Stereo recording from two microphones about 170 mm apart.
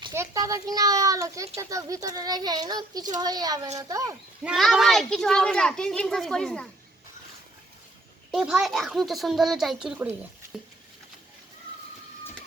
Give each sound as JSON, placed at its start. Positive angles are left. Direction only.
{"t": 0.1, "sound": "speech", "side_deg": -15}
{"t": 4.4, "sound": "a child's voice", "side_deg": 0}
{"t": 8.3, "sound": "a child's voice", "side_deg": -5}